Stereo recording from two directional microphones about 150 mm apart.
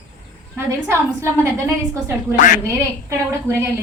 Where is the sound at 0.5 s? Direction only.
20° right (ahead or behind).